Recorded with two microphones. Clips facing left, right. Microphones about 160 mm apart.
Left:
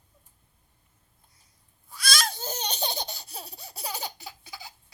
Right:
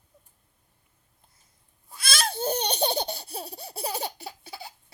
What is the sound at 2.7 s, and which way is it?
Laughter, 30° right (ahead or behind).